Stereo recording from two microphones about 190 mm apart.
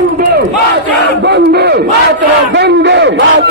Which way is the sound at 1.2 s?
60° right (ahead or behind).